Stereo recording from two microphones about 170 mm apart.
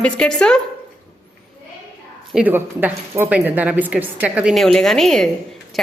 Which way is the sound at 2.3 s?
5° right (ahead or behind).